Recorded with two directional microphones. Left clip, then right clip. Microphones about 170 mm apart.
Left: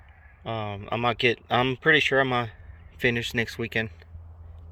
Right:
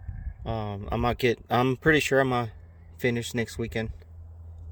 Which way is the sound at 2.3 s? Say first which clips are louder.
Left 1 dB; 25° right (ahead or behind).